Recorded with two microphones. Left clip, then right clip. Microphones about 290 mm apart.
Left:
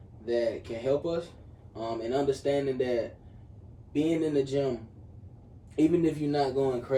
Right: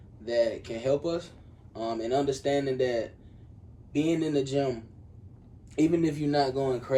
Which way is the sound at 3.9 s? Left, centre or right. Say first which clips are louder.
Even; right.